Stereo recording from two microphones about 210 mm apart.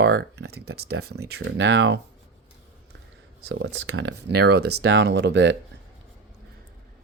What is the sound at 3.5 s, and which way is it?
Speech, 55° right (ahead or behind).